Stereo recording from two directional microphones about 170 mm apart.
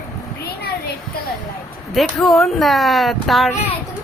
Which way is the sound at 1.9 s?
Centre (ahead or behind).